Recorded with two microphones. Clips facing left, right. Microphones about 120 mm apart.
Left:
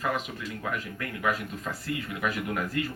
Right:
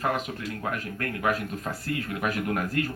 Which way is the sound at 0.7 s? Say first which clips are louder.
Right 2 dB; 55° right (ahead or behind).